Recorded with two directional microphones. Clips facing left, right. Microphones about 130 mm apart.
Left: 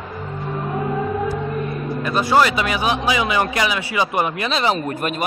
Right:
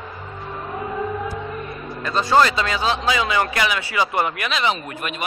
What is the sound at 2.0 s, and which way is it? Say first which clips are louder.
A man's voice: even; 10° left (ahead or behind).